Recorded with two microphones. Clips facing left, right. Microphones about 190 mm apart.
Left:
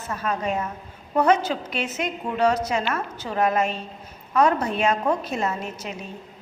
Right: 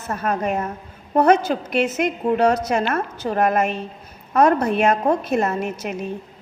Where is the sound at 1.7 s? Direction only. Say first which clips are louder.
Right 7 dB; 60° right (ahead or behind).